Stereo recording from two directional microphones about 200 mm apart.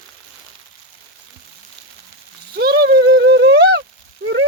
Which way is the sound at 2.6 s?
50° right (ahead or behind).